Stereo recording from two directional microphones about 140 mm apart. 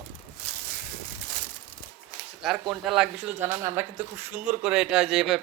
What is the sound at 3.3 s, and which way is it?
Speech, 15° right (ahead or behind).